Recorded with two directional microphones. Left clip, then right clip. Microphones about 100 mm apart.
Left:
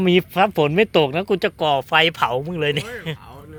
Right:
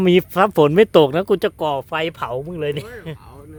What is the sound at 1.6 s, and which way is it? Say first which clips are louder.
Speech: left 2 dB; 45° right (ahead or behind).